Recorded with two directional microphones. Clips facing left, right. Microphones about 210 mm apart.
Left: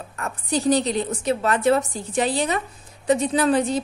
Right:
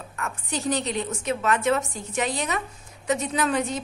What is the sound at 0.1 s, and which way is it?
A woman's voice, 35° left (ahead or behind).